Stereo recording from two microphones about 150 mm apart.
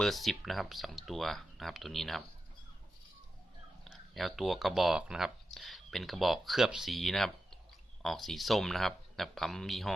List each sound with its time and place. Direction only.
0.0 s speech: centre (ahead or behind)
3.8 s speech: centre (ahead or behind)